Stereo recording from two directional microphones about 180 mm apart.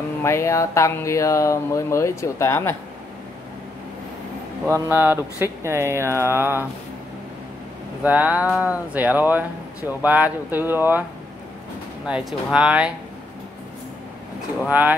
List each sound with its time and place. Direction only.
0.2 s speech: 15° left (ahead or behind)
4.6 s speech: 10° right (ahead or behind)
8.0 s speech: 10° right (ahead or behind)
12.1 s speech: 5° right (ahead or behind)
14.7 s speech: 10° right (ahead or behind)